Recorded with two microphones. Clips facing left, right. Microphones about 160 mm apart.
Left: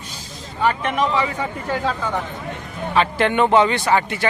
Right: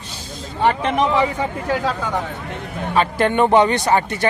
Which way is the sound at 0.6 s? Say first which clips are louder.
Right 2 dB; 25° right (ahead or behind).